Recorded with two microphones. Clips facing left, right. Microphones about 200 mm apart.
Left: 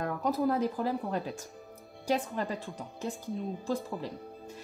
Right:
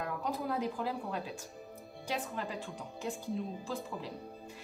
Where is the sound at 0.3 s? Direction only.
40° left (ahead or behind).